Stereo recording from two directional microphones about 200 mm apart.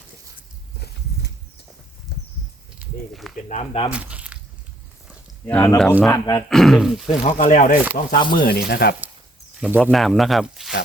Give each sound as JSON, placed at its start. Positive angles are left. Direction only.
{"t": 2.1, "sound": "a sound", "side_deg": 55}
{"t": 2.7, "sound": "speech", "side_deg": 0}
{"t": 3.5, "sound": "speech", "side_deg": 30}
{"t": 3.9, "sound": "a sound", "side_deg": -5}
{"t": 5.0, "sound": "a sound", "side_deg": 5}
{"t": 6.0, "sound": "speech", "side_deg": 15}
{"t": 6.5, "sound": "speech", "side_deg": 0}
{"t": 7.2, "sound": "speech", "side_deg": 35}
{"t": 8.4, "sound": "speech", "side_deg": 55}
{"t": 9.6, "sound": "speech", "side_deg": -5}